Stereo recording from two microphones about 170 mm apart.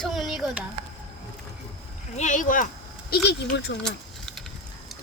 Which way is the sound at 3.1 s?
65° left (ahead or behind).